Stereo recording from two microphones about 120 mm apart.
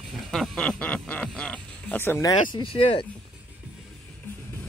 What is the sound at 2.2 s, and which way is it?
Speech, 40° left (ahead or behind).